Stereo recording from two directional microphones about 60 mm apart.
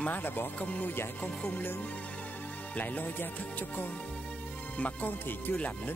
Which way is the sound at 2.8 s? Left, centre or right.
Left.